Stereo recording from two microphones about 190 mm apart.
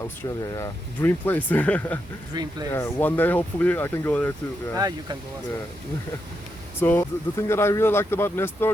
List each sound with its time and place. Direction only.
0.0 s speech: 15° left (ahead or behind)
2.3 s speech: 20° right (ahead or behind)
2.7 s speech: 10° left (ahead or behind)
4.8 s speech: 20° right (ahead or behind)
6.7 s speech: 10° left (ahead or behind)